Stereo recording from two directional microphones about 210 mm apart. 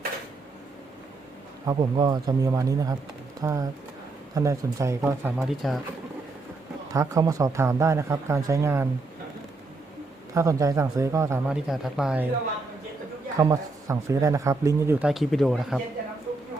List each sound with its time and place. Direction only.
1.6 s speech: 20° right (ahead or behind)
5.4 s speech: centre (ahead or behind)
6.9 s speech: 15° right (ahead or behind)
10.3 s speech: 15° right (ahead or behind)
13.3 s speech: 15° right (ahead or behind)